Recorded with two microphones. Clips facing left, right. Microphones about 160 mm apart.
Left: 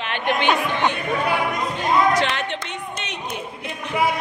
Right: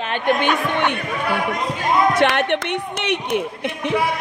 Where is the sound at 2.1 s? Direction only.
60° right (ahead or behind).